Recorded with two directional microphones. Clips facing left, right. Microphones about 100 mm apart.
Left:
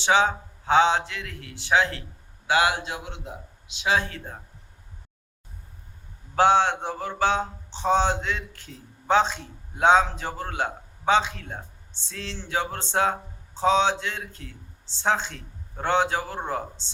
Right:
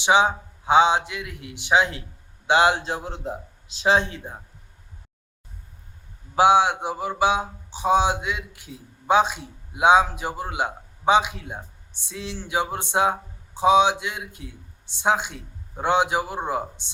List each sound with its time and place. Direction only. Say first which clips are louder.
0.0 s speech: right 2 dB; 15° right (ahead or behind); by 3.9 s 35° right (ahead or behind)
3.9 s speech: right 3 dB; 20° right (ahead or behind)
6.3 s speech: right 2 dB; 10° right (ahead or behind)